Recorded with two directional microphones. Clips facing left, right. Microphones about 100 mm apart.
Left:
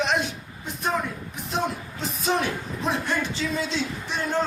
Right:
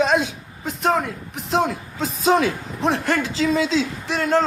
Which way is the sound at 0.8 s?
90° right.